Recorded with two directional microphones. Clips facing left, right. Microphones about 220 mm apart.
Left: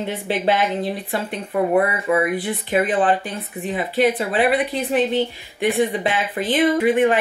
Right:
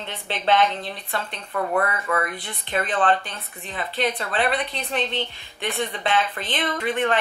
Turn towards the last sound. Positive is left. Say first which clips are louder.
# left 8 dB
turn(degrees=10)  # may be behind; listen again after turning